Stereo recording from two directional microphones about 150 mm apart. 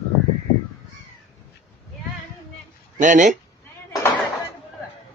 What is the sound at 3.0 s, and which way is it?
Speech, 55° right (ahead or behind).